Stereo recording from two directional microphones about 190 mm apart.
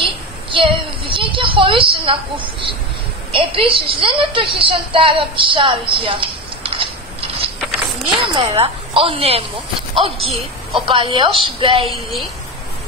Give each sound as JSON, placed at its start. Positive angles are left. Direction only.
{"t": 0.0, "sound": "a sound", "side_deg": -25}
{"t": 3.3, "sound": "a woman's voice", "side_deg": -30}
{"t": 11.9, "sound": "a woman's voice", "side_deg": 0}